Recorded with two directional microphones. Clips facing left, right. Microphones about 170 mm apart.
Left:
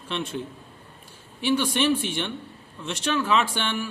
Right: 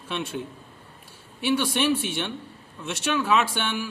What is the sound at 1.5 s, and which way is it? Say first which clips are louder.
A man's voice: left 1 dB; 10° right (ahead or behind).